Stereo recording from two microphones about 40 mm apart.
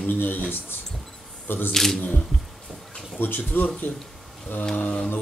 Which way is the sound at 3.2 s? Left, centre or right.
Left.